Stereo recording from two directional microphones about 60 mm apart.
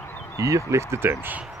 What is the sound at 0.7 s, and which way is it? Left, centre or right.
Speech, right.